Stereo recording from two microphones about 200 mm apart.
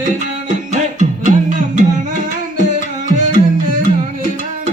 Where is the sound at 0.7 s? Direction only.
40° right (ahead or behind).